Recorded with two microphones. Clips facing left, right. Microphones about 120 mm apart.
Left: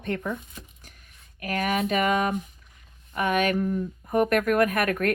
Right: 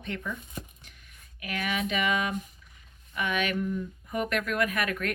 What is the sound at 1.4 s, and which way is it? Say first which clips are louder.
Speech: left 6 dB; 45° left (ahead or behind).